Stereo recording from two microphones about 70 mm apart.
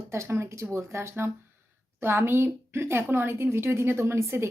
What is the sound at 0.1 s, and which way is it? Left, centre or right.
A woman's voice, right.